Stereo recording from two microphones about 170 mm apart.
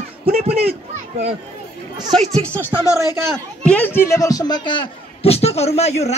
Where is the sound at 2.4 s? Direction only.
10° left (ahead or behind).